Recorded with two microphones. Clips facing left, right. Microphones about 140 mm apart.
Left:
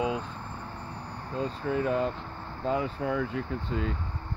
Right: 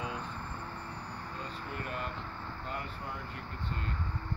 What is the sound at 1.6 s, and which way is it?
Speech, 90° left.